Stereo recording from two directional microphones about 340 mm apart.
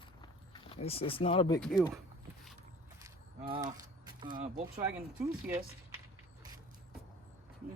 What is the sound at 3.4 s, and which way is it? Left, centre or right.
Speech, centre.